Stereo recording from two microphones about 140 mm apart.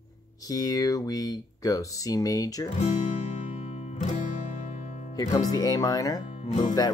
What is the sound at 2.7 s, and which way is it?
Music, 55° left (ahead or behind).